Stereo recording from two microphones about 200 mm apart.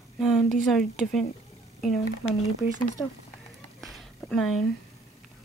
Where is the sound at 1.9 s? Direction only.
30° left (ahead or behind).